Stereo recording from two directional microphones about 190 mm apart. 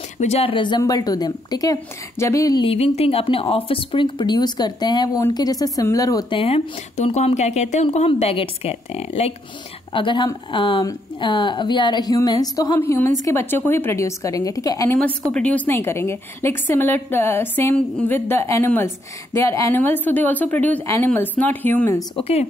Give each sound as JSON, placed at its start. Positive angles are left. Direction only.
{"t": 0.2, "sound": "speech", "side_deg": 30}
{"t": 6.4, "sound": "a woman's voice", "side_deg": 30}
{"t": 15.3, "sound": "a woman's voice", "side_deg": 5}
{"t": 22.1, "sound": "speech", "side_deg": 30}